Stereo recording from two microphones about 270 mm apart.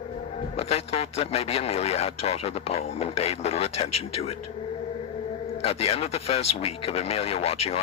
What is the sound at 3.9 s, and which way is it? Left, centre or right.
Speech, left.